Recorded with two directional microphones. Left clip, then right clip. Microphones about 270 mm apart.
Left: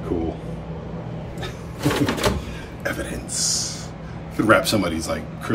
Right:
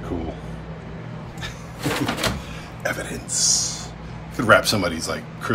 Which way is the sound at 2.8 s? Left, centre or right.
Centre.